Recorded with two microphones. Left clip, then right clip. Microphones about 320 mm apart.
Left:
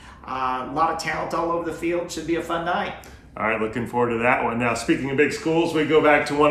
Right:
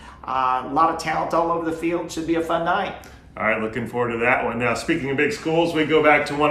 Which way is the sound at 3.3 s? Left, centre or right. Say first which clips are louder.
Right 1 dB; centre.